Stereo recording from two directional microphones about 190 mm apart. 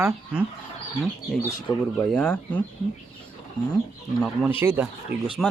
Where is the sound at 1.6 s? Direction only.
20° left (ahead or behind).